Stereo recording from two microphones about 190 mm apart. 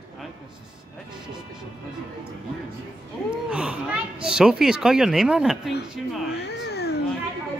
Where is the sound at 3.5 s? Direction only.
5° right (ahead or behind).